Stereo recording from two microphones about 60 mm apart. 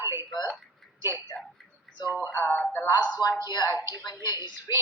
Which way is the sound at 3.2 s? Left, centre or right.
Left.